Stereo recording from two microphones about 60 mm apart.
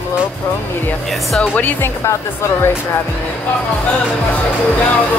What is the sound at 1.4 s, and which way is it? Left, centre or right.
Speech, left.